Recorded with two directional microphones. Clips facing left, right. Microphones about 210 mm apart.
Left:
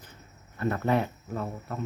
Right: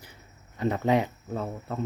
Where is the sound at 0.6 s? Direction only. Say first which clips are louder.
Right 2 dB; 15° right (ahead or behind).